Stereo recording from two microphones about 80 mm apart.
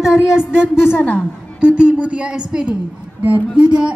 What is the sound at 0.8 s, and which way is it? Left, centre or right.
Speech, left.